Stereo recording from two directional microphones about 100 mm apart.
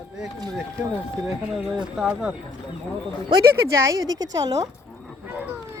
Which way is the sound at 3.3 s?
30° right (ahead or behind).